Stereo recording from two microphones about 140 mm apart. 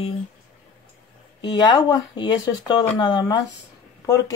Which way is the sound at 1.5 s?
30° left (ahead or behind).